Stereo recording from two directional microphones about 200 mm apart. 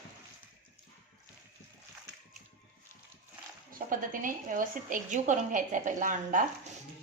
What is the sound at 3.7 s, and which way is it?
A woman's voice, 45° right (ahead or behind).